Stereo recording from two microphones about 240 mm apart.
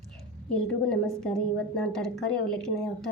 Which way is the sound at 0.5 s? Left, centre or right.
Centre.